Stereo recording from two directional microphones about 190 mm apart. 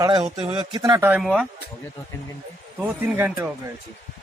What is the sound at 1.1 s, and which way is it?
Speech, centre (ahead or behind).